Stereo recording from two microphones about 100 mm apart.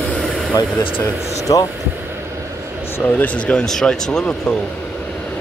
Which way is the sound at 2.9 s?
15° left (ahead or behind).